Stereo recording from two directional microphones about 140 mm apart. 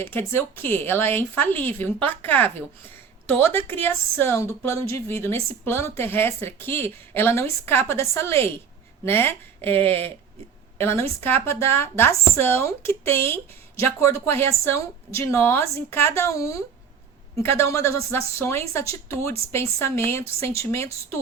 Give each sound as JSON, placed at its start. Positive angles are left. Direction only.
{"t": 0.0, "sound": "a woman's voice", "side_deg": 15}